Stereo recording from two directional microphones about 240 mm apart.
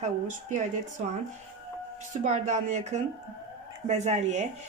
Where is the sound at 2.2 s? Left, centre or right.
Right.